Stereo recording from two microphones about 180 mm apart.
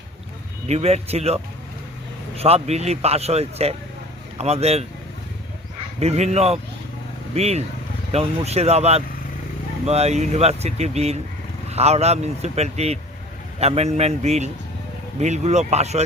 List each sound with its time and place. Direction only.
0.7 s speech: 35° right (ahead or behind)
6.0 s speech: 35° right (ahead or behind)